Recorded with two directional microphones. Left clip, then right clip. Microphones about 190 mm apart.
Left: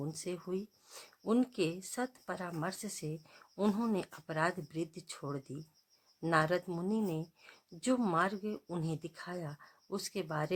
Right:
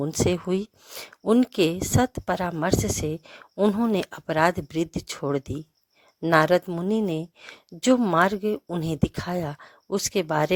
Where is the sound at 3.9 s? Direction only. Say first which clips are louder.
Right 13 dB; 45° right (ahead or behind).